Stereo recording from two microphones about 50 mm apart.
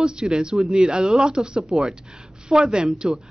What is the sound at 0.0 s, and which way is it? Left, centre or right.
A woman's voice, centre.